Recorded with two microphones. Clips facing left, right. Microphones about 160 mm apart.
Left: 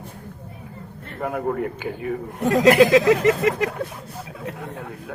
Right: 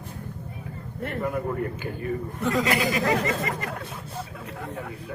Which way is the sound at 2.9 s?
85° left.